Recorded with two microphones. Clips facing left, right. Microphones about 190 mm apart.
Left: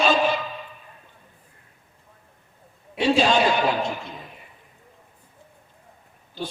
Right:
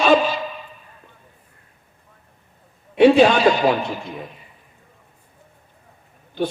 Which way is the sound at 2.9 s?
60° right (ahead or behind).